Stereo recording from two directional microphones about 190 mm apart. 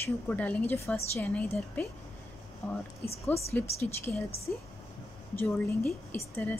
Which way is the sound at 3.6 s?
35° left (ahead or behind).